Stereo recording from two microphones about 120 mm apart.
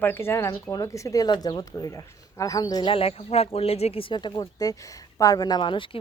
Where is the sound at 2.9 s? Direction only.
55° left (ahead or behind).